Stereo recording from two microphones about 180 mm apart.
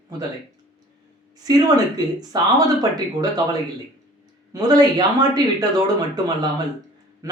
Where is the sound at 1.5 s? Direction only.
20° right (ahead or behind).